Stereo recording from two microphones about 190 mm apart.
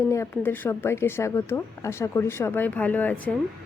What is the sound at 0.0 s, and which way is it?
Speech, 15° left (ahead or behind).